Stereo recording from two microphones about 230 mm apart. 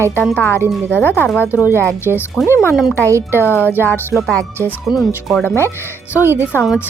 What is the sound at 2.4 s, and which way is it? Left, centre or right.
Speech, centre.